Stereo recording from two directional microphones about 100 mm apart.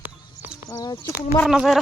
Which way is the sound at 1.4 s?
5° right (ahead or behind).